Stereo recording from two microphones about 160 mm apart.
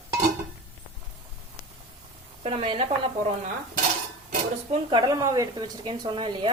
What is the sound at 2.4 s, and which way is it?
Speech, 40° right (ahead or behind).